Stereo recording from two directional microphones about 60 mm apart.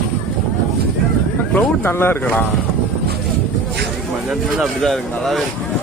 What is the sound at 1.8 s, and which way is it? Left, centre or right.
Speech, left.